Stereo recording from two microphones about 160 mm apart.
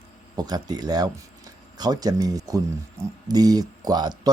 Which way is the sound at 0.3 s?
25° right (ahead or behind).